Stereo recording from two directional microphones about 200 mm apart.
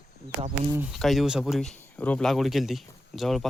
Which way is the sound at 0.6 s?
10° right (ahead or behind).